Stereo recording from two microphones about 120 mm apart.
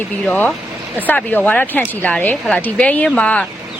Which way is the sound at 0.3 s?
15° left (ahead or behind).